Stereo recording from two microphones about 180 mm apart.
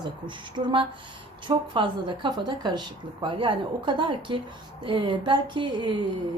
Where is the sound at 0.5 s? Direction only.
25° right (ahead or behind).